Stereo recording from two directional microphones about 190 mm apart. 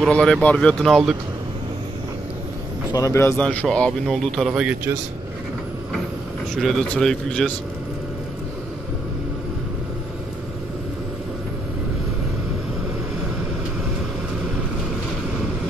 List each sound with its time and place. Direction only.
0.0 s a man's voice: 5° left (ahead or behind)
2.9 s a man's voice: 15° left (ahead or behind); by 4.7 s 5° right (ahead or behind)
6.5 s a man's voice: centre (ahead or behind)